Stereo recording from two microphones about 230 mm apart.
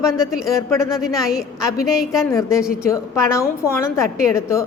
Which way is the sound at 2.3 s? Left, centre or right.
Centre.